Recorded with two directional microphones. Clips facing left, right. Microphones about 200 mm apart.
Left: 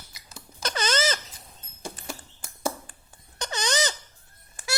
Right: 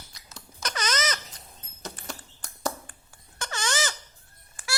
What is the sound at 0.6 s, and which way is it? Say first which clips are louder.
Squeak: left 4 dB; 30° left (ahead or behind).